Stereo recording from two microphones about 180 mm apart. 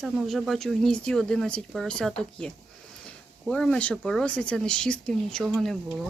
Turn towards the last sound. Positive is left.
turn(degrees=0)  # may be behind; listen again after turning